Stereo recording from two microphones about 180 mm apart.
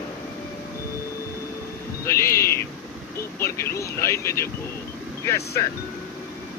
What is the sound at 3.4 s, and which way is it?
Speech, 15° left (ahead or behind).